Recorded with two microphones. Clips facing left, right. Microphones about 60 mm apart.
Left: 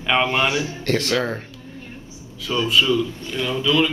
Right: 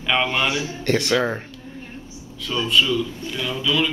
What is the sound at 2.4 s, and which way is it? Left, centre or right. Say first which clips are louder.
A man's voice: left 1 dB; centre.